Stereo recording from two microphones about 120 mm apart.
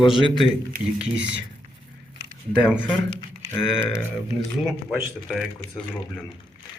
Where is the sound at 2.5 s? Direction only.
5° right (ahead or behind).